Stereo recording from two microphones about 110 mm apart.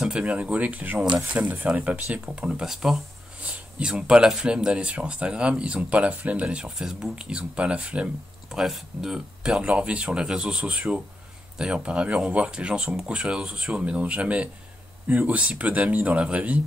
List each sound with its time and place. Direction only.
0.0 s speech: 10° right (ahead or behind)